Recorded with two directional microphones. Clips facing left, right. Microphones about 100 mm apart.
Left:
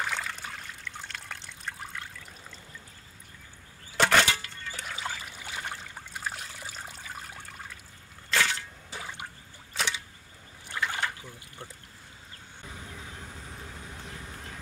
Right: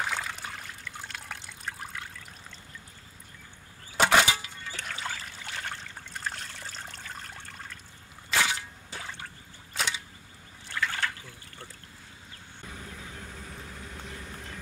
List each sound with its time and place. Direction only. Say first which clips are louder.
0.0 s trickle: right 1 dB; 5° right (ahead or behind)
3.9 s a sound: right 1 dB; 10° right (ahead or behind)
4.7 s trickle: even; 5° left (ahead or behind)
8.3 s a sound: even; 10° right (ahead or behind)
8.9 s water: left 1 dB; 5° left (ahead or behind)
9.8 s camera: even; centre (ahead or behind)
10.7 s trickle: even; 15° left (ahead or behind)